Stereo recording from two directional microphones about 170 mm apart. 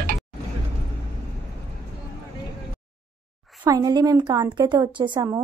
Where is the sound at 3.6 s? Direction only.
25° right (ahead or behind).